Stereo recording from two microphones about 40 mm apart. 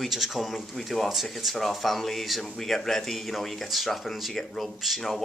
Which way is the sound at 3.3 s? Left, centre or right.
Centre.